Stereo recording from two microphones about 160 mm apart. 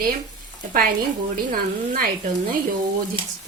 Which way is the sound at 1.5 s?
60° right (ahead or behind).